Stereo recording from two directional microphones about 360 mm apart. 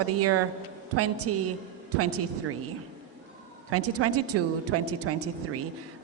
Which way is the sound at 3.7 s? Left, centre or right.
Right.